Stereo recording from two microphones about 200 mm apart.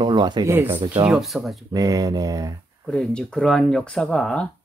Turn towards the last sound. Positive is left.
turn(degrees=5)  # may be behind; listen again after turning